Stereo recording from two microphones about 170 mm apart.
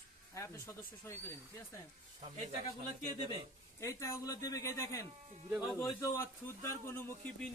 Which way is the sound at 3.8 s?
15° left (ahead or behind).